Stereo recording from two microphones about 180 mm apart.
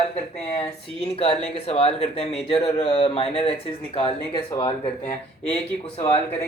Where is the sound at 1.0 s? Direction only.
35° left (ahead or behind).